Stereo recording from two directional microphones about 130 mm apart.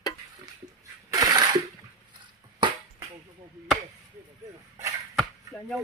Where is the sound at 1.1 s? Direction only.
30° right (ahead or behind).